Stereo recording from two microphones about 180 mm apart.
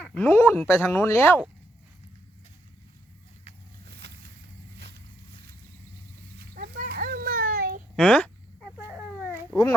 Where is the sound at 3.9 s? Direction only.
70° right (ahead or behind).